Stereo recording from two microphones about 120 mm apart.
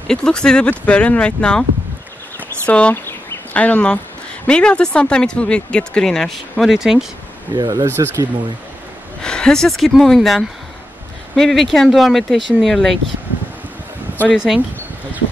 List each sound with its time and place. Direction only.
0.1 s speech: 5° left (ahead or behind)
2.6 s a sound: 10° left (ahead or behind)
4.5 s speech: 10° left (ahead or behind)
7.5 s speech: 30° right (ahead or behind)
9.2 s speech: 5° left (ahead or behind)
14.3 s speech: 5° right (ahead or behind)